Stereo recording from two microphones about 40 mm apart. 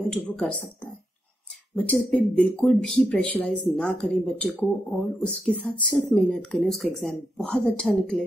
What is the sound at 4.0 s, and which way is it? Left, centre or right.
A woman's voice, left.